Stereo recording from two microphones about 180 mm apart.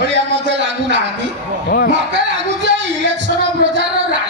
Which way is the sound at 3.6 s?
90° right.